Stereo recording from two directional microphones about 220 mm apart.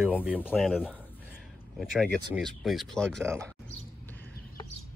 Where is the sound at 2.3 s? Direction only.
Centre (ahead or behind).